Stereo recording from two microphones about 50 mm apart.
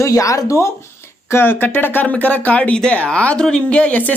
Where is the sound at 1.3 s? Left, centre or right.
Left.